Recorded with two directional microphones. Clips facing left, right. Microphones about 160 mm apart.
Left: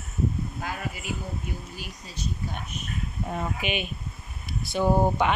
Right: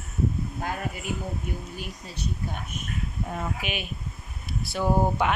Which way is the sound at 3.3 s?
Centre (ahead or behind).